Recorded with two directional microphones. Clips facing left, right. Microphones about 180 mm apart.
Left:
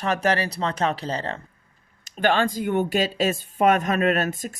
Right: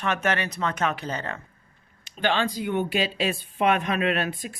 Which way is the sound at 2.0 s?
50° left (ahead or behind).